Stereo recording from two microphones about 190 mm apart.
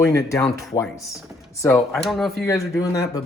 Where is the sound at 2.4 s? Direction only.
15° left (ahead or behind).